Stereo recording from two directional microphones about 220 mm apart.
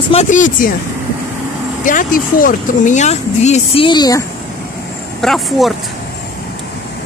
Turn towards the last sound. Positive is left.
turn(degrees=0)  # may be behind; listen again after turning